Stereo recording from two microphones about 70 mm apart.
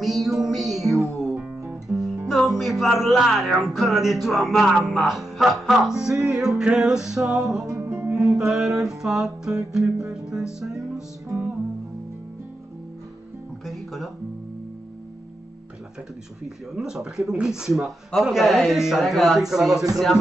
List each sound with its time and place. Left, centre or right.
0.0 s music: centre
7.6 s music: right
8.4 s speech: centre
13.7 s music: centre
16.4 s speech: centre